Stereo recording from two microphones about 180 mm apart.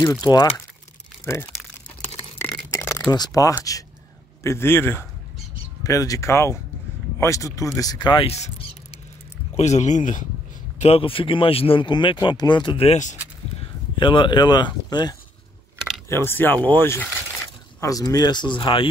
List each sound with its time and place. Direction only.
0.2 s speech: 20° left (ahead or behind)
2.7 s a sound: 15° left (ahead or behind)
3.1 s speech: 20° left (ahead or behind)
9.6 s speech: 40° left (ahead or behind)
10.8 s speech: 30° left (ahead or behind)
13.9 s speech: 25° left (ahead or behind)